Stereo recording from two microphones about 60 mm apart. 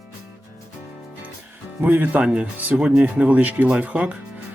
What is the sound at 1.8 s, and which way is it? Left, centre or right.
Speech, right.